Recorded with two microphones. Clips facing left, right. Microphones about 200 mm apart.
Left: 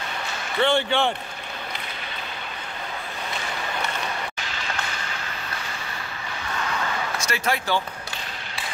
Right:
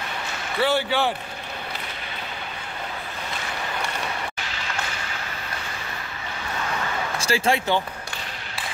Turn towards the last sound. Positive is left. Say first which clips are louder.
# right 3 dB
turn(degrees=-25)  # may be behind; listen again after turning